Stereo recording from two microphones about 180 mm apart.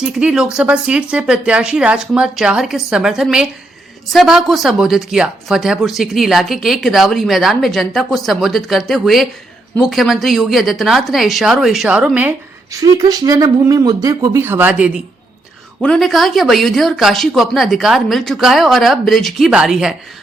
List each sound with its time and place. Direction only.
0.0 s speech: 5° right (ahead or behind)
12.8 s speech: 20° right (ahead or behind)
15.8 s speech: 5° left (ahead or behind)